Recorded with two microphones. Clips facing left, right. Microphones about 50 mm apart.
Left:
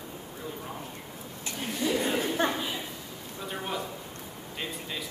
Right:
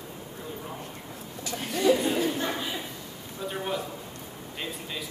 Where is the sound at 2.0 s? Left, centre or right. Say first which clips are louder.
Right 1 dB; left.